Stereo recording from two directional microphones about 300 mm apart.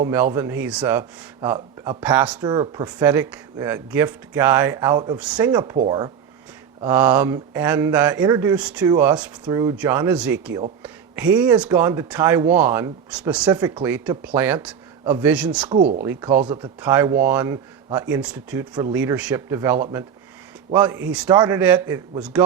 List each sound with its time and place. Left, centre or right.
0.0 s speech: centre
15.7 s speech: centre
16.0 s speech: centre